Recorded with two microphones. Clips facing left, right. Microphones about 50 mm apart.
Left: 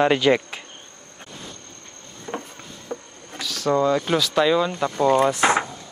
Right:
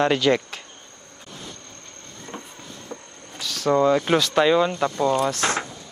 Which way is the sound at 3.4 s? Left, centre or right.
Centre.